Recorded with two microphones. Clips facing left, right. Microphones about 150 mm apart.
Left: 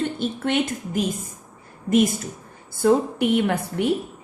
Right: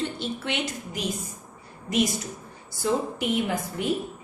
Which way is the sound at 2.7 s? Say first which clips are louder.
Left 7 dB; 55° left (ahead or behind).